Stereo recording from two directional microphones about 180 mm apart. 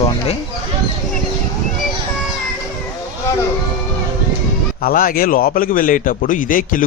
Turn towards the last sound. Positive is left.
turn(degrees=50)  # may be behind; listen again after turning